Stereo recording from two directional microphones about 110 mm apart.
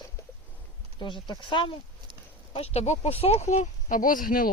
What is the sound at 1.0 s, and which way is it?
Speech, 45° left (ahead or behind).